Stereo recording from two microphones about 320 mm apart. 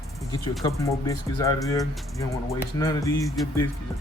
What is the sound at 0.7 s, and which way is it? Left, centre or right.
Speech, centre.